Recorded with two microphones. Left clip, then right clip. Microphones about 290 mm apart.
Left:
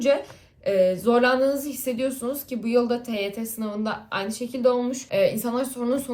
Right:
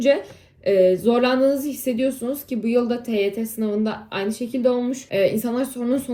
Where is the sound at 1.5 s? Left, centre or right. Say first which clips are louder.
Right 4 dB; centre.